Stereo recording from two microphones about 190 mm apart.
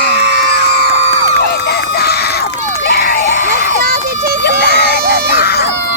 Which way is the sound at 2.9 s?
55° left (ahead or behind).